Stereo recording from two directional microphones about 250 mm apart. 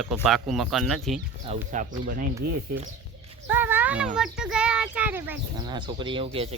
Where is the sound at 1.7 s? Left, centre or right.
Right.